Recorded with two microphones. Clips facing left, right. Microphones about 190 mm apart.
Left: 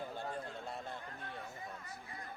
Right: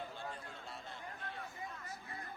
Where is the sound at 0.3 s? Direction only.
45° left (ahead or behind).